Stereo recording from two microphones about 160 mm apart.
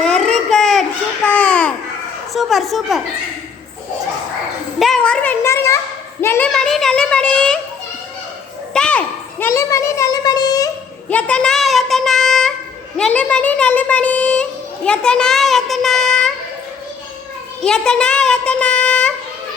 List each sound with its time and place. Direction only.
0.0 s babbling: 5° left (ahead or behind)
2.3 s a child's voice: centre (ahead or behind)
4.8 s speech: 5° left (ahead or behind)
6.5 s a child's voice: centre (ahead or behind)
8.7 s a sound: 5° left (ahead or behind)
9.5 s child singing: 20° left (ahead or behind)
11.1 s a child's voice: 5° left (ahead or behind)
17.6 s speech: 5° left (ahead or behind)